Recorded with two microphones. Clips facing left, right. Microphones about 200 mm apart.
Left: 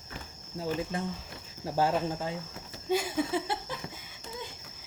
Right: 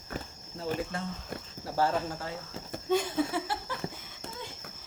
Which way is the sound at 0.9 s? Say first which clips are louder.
Left 1 dB; 15° left (ahead or behind).